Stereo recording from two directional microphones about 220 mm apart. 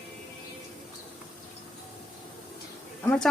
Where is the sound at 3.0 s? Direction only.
5° left (ahead or behind).